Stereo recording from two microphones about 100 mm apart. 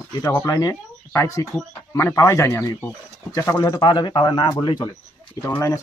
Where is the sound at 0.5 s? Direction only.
30° left (ahead or behind).